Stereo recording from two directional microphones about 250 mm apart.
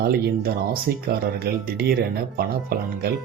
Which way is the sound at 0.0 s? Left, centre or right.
Right.